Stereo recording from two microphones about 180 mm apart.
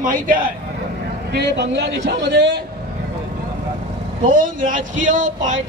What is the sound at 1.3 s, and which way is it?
A man's voice, 75° right (ahead or behind).